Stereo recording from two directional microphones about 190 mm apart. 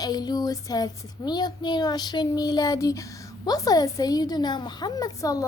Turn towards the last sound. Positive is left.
turn(degrees=20)  # may be behind; listen again after turning